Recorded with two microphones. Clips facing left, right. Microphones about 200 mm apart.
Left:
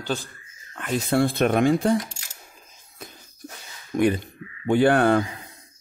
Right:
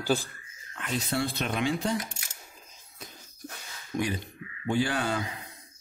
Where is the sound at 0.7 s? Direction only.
50° left (ahead or behind).